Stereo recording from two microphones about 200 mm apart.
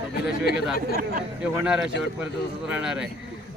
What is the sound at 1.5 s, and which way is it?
A man's voice, 5° right (ahead or behind).